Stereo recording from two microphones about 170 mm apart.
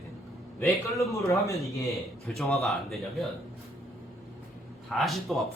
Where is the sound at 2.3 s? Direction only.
Centre (ahead or behind).